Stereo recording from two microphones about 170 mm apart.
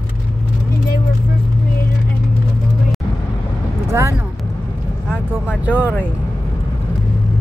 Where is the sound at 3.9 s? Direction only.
15° right (ahead or behind).